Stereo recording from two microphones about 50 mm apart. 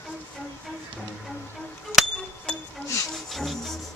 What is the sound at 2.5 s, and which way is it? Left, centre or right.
Music, left.